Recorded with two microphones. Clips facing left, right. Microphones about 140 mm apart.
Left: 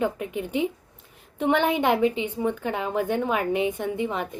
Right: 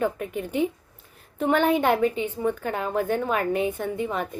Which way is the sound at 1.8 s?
10° left (ahead or behind).